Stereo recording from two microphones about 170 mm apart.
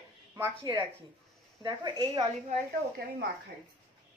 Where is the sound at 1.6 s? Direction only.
25° right (ahead or behind).